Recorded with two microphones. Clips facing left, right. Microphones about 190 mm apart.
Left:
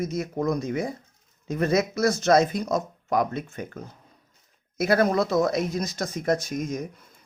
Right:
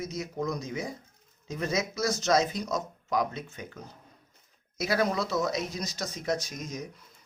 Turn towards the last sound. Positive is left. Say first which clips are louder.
# left 8 dB
turn(degrees=55)  # may be behind; listen again after turning